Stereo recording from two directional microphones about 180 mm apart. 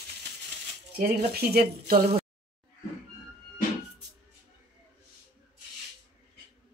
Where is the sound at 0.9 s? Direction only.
60° right (ahead or behind).